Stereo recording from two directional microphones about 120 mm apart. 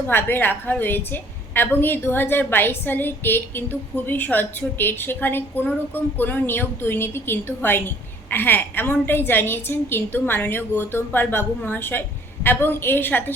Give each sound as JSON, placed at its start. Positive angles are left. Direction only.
{"t": 0.1, "sound": "a woman's voice", "side_deg": 15}